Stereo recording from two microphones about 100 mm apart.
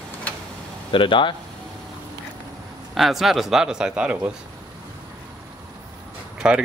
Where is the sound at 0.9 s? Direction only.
55° left (ahead or behind).